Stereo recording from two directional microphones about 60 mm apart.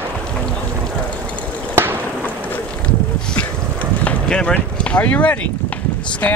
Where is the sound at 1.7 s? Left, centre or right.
Right.